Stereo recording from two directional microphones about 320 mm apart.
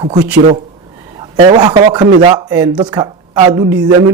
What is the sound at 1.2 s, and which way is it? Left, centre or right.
Speech, centre.